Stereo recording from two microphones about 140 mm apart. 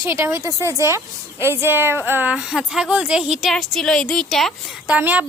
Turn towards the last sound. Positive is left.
turn(degrees=-10)  # may be behind; listen again after turning